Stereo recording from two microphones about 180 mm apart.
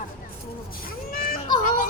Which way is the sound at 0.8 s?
55° left (ahead or behind).